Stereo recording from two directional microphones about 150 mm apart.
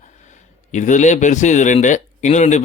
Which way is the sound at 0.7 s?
55° left (ahead or behind).